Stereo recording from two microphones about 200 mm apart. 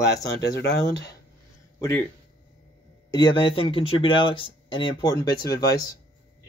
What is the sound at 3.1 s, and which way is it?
Speech, 20° left (ahead or behind).